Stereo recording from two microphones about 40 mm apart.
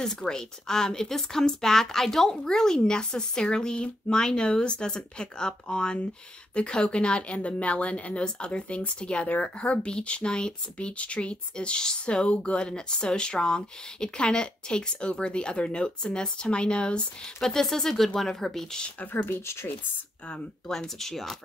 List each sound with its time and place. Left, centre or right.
0.0 s a woman's voice: centre
7.3 s a woman's voice: left
17.4 s a woman's voice: centre
19.2 s speech: left
20.6 s a woman's voice: centre